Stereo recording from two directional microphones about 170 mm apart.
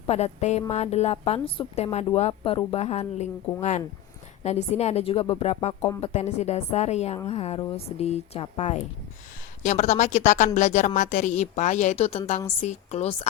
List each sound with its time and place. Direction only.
0.1 s a woman's voice: 40° left (ahead or behind)